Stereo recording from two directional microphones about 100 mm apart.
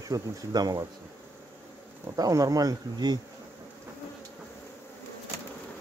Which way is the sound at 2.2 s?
35° right (ahead or behind).